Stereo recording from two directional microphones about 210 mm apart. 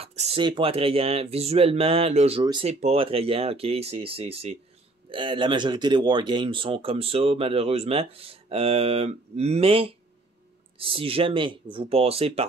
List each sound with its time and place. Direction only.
0.0 s speech: 30° right (ahead or behind)